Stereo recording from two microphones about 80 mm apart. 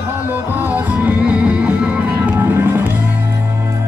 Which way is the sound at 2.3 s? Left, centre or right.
Right.